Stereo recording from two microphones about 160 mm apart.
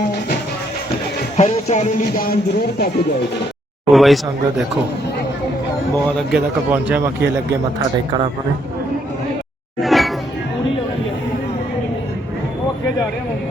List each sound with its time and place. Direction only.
1.4 s speech: 45° left (ahead or behind); by 2.9 s 70° left (ahead or behind)
3.9 s speech: centre (ahead or behind)
6.1 s a man's voice: 5° right (ahead or behind)
9.8 s music: centre (ahead or behind)